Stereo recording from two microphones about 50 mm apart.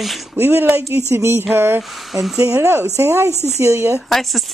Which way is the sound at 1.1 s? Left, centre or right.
Right.